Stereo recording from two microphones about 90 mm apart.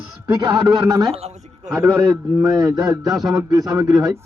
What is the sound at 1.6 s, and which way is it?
Speech, 10° right (ahead or behind).